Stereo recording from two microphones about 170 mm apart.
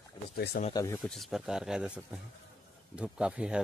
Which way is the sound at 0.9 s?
Centre (ahead or behind).